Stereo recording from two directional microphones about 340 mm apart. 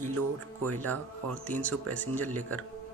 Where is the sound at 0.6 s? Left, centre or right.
Right.